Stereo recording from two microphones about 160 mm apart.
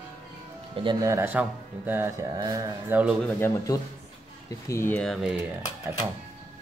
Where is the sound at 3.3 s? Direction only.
20° left (ahead or behind); by 5.3 s centre (ahead or behind).